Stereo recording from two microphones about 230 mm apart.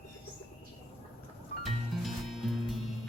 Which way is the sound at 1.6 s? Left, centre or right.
Centre.